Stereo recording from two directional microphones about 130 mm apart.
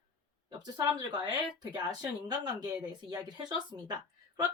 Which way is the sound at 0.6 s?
35° right (ahead or behind).